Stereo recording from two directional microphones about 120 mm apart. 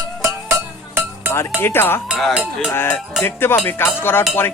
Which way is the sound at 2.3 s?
10° right (ahead or behind).